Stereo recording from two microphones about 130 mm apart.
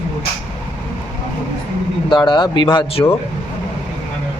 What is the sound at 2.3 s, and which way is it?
Speech, 35° left (ahead or behind).